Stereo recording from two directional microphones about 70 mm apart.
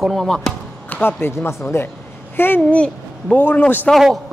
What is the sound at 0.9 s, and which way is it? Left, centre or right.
Speech, left.